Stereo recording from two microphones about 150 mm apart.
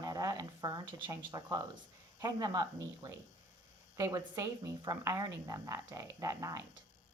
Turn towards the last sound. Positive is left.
turn(degrees=-20)  # may be behind; listen again after turning